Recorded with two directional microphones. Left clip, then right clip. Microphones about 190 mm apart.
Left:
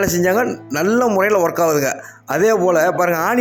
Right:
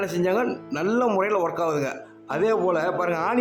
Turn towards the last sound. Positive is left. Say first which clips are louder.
# left 7 dB
turn(degrees=25)  # may be behind; listen again after turning